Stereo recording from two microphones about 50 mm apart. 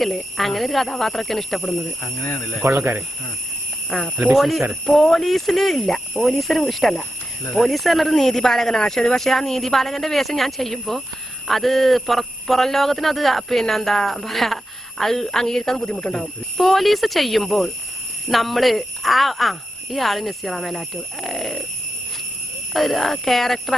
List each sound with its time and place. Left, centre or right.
0.0 s a man's voice: centre
2.6 s speech: right
3.8 s a man's voice: centre
15.9 s speech: left
16.1 s a man's voice: centre
22.7 s a man's voice: centre